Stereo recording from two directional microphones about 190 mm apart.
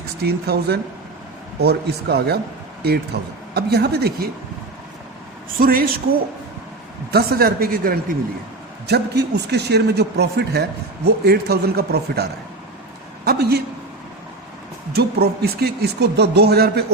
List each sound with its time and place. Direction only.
0.2 s speech: 55° right (ahead or behind)
5.5 s a woman's voice: 50° right (ahead or behind)
7.1 s a woman's voice: 55° right (ahead or behind)
8.9 s speech: 60° right (ahead or behind)
13.2 s speech: 55° right (ahead or behind)
14.9 s speech: 55° right (ahead or behind)